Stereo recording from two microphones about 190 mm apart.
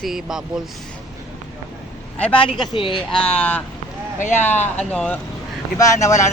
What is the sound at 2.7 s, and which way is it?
Speech, 25° left (ahead or behind).